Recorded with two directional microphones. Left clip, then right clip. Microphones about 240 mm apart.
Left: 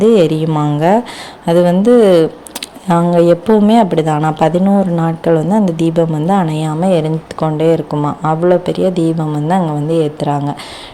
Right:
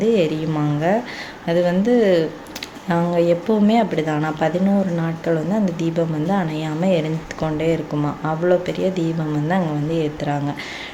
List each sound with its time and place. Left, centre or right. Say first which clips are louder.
0.0 s speech: left 8 dB; left